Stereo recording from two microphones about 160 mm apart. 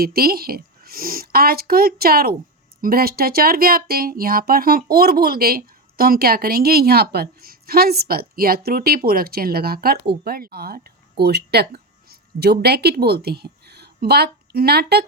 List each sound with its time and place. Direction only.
0.0 s speech: 70° right (ahead or behind); by 15.0 s 90° right